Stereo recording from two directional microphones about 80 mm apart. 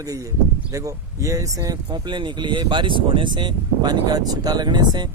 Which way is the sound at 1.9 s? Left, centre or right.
Right.